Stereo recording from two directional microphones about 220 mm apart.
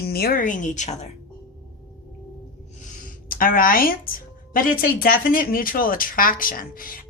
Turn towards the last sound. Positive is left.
turn(degrees=40)  # may be behind; listen again after turning